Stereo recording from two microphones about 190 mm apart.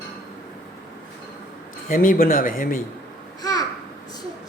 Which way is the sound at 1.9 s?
45° left (ahead or behind).